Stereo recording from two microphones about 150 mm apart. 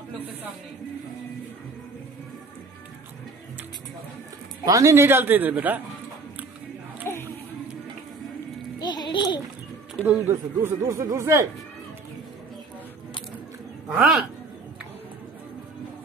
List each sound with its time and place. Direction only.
4.6 s a man's voice: 20° right (ahead or behind)
7.1 s a sound: 15° left (ahead or behind)
8.7 s babbling: 30° left (ahead or behind)
10.0 s speech: 15° right (ahead or behind)
13.8 s speech: 5° right (ahead or behind)